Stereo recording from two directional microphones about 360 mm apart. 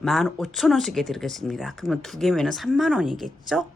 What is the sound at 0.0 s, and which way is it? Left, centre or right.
A woman's voice, centre.